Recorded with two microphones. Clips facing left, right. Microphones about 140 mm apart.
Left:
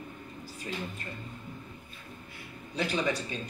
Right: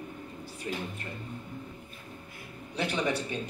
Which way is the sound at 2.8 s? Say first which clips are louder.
Even; 65° right (ahead or behind).